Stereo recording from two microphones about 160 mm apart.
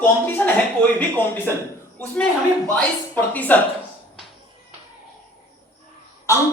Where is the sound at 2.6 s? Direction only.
10° left (ahead or behind).